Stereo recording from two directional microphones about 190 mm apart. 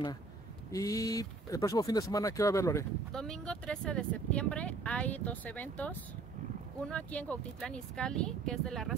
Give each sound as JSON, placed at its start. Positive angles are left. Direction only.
{"t": 0.7, "sound": "speech", "side_deg": 15}
{"t": 3.1, "sound": "speech", "side_deg": 5}